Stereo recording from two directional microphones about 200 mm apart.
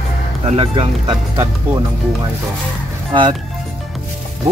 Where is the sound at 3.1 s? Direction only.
25° right (ahead or behind).